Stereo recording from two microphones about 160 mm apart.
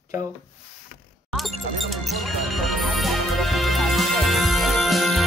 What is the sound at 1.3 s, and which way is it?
Music, centre (ahead or behind).